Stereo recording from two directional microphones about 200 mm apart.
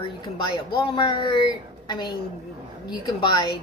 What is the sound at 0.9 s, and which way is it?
A woman's voice, 25° left (ahead or behind).